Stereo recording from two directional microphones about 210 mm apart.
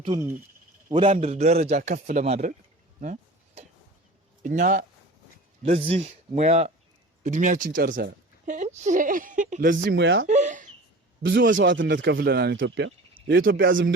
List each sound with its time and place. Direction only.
0.0 s a man's voice: 25° right (ahead or behind)
3.0 s a sound: 35° right (ahead or behind)
4.4 s a woman's voice: 40° right (ahead or behind)
5.6 s a woman's voice: 30° right (ahead or behind)
9.8 s speech: 60° right (ahead or behind)
10.2 s a sound: 35° right (ahead or behind)
11.5 s a man's voice: 60° right (ahead or behind); by 13.7 s 45° right (ahead or behind)